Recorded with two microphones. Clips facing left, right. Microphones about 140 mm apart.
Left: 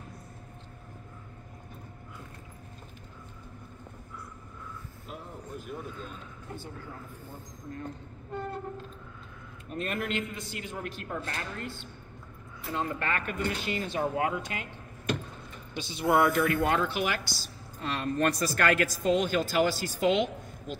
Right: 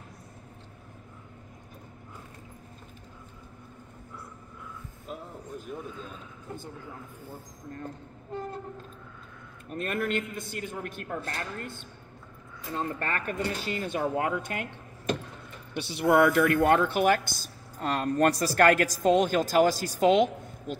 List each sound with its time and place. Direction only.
9.8 s speech: 50° right (ahead or behind)
15.7 s speech: 65° right (ahead or behind); by 20.7 s 40° right (ahead or behind)